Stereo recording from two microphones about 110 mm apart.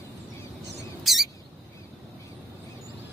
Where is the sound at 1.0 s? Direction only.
Centre (ahead or behind).